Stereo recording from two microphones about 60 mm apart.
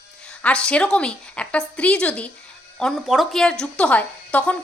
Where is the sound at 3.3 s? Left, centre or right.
Centre.